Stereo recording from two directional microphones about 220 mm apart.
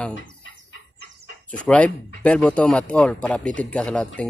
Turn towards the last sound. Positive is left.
turn(degrees=5)  # may be behind; listen again after turning